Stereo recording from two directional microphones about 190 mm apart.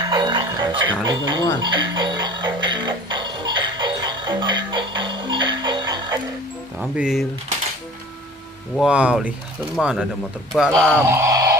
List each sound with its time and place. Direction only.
0.0 s music: 25° right (ahead or behind)
6.8 s speech: centre (ahead or behind)
8.7 s speech: 5° right (ahead or behind)